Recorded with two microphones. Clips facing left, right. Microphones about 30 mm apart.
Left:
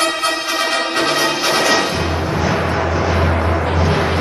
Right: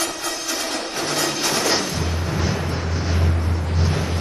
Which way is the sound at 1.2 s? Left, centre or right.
Left.